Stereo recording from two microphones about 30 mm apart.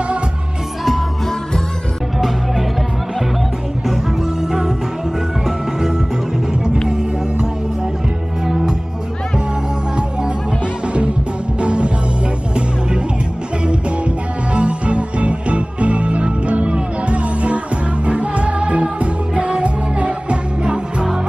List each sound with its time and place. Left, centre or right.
2.1 s music: centre
4.4 s music: centre
8.5 s music: centre
11.6 s music: right
14.5 s music: right